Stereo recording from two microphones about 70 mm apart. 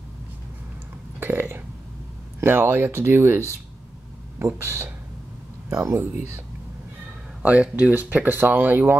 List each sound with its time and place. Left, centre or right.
1.2 s speech: right
5.7 s speech: right
5.9 s speech: right
7.4 s speech: right